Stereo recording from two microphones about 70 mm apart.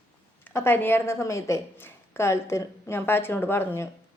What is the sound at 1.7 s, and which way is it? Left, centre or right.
A woman's voice, left.